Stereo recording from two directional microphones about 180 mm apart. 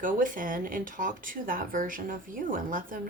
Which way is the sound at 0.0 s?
50° right (ahead or behind).